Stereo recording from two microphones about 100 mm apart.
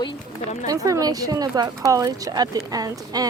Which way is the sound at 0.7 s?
35° right (ahead or behind).